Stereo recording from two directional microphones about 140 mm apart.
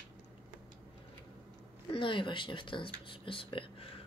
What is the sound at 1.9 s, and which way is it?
Speech, 35° left (ahead or behind).